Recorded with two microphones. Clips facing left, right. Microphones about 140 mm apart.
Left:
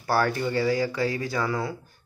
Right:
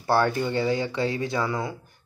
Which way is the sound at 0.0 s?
25° right (ahead or behind).